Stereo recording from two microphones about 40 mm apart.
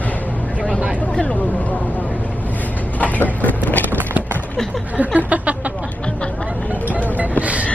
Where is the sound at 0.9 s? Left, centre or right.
Left.